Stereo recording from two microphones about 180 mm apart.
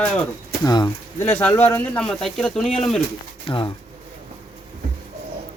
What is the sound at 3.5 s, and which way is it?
Speech, 30° left (ahead or behind).